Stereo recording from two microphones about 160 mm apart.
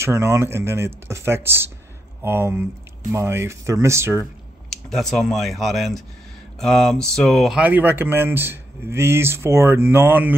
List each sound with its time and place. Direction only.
0.0 s speech: 15° right (ahead or behind)
4.6 s speech: 5° left (ahead or behind); by 10.3 s 15° right (ahead or behind)